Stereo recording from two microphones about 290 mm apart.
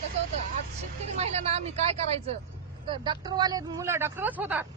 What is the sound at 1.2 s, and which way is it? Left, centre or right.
Speech, right.